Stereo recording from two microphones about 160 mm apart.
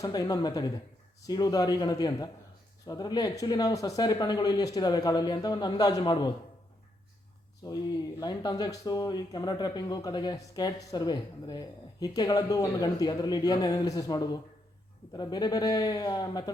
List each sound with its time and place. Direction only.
0.0 s speech: 25° left (ahead or behind)
7.6 s speech: 25° left (ahead or behind)